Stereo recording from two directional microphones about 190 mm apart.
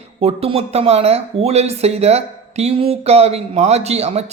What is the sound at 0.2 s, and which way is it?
Speech, 30° right (ahead or behind).